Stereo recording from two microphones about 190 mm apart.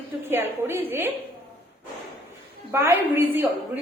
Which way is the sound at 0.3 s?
10° right (ahead or behind).